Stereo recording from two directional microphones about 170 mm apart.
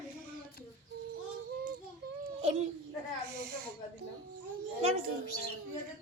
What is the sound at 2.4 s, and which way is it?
Speech, 40° right (ahead or behind).